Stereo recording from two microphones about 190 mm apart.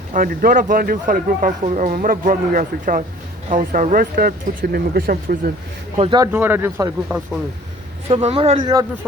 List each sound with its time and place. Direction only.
0.1 s speech: 45° right (ahead or behind)
6.0 s speech: 25° right (ahead or behind)
6.3 s speech: 10° right (ahead or behind)
8.1 s speech: 30° right (ahead or behind)